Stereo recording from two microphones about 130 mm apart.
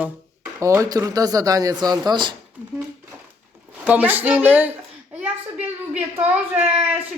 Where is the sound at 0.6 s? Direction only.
25° right (ahead or behind).